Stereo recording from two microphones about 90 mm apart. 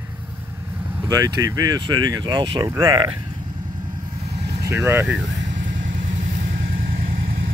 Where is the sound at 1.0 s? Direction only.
45° right (ahead or behind); by 3.2 s 65° right (ahead or behind).